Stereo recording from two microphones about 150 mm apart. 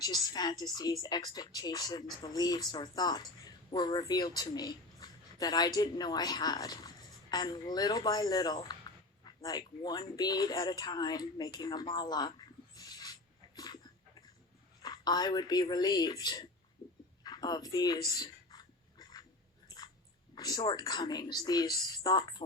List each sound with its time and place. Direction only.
0.0 s a woman's voice: 25° left (ahead or behind)
12.7 s a sound: 25° left (ahead or behind)
14.8 s a woman's voice: 25° left (ahead or behind)
17.2 s a sound: 25° left (ahead or behind)
19.7 s biting: 25° left (ahead or behind)
20.3 s a woman's voice: 25° left (ahead or behind)